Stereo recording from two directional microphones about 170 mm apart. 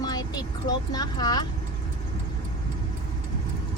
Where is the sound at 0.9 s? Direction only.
25° left (ahead or behind).